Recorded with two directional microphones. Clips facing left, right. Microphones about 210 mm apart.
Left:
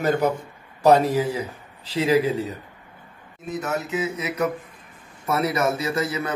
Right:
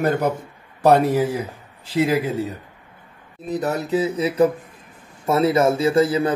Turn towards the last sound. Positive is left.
turn(degrees=-30)  # may be behind; listen again after turning